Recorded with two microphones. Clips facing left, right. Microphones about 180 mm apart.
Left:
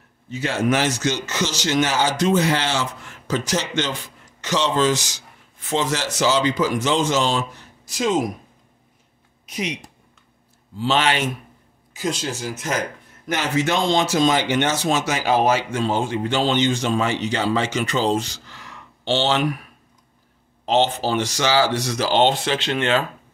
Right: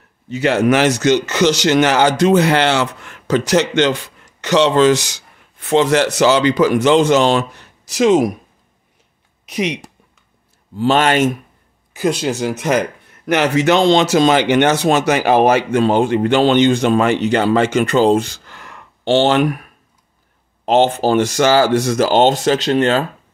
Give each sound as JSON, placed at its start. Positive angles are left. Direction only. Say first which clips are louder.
{"t": 0.3, "sound": "speech", "louder": "right 7 dB", "side_deg": -70}
{"t": 9.5, "sound": "speech", "louder": "right 7 dB", "side_deg": -75}
{"t": 10.8, "sound": "speech", "louder": "right 7 dB", "side_deg": -50}
{"t": 11.9, "sound": "speech", "louder": "right 8 dB", "side_deg": -60}